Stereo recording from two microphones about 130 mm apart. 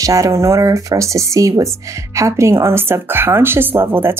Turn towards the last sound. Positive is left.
turn(degrees=-20)  # may be behind; listen again after turning